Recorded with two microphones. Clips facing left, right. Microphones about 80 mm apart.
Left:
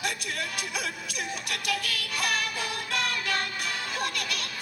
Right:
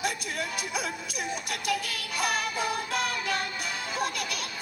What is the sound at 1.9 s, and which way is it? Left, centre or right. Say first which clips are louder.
Music: even; right.